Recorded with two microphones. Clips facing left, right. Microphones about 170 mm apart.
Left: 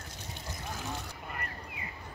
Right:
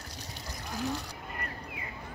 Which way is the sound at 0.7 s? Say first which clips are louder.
Right 7 dB; 35° right (ahead or behind).